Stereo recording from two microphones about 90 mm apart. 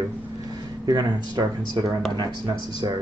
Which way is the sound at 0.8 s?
50° right (ahead or behind).